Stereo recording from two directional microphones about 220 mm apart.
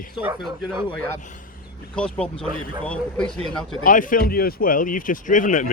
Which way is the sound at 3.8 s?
40° left (ahead or behind).